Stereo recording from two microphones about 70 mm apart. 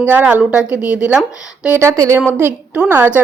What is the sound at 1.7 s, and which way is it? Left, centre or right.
Speech, right.